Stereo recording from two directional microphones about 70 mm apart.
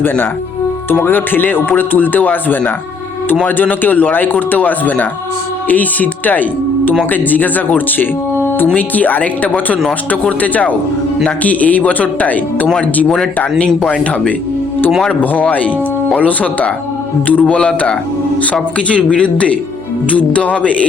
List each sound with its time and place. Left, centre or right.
1.0 s a man's voice: left
15.2 s a man's voice: left